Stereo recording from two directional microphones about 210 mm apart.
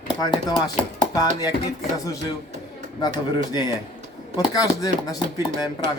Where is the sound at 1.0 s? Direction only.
20° left (ahead or behind).